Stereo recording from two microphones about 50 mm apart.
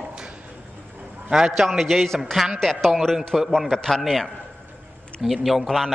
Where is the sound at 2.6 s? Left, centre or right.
Centre.